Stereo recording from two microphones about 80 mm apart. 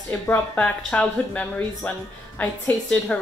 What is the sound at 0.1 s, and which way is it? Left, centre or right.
Speech, left.